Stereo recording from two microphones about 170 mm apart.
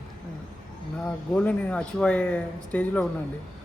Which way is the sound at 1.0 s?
5° left (ahead or behind).